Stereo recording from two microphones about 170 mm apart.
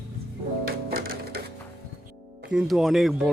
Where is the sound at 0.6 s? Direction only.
60° right (ahead or behind).